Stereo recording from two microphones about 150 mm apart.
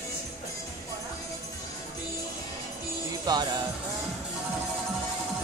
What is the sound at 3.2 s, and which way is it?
Music, 25° right (ahead or behind).